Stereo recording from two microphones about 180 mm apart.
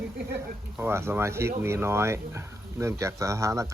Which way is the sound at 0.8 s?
15° right (ahead or behind).